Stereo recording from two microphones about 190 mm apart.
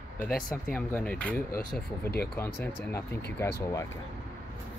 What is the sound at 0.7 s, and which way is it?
Speech, 10° left (ahead or behind).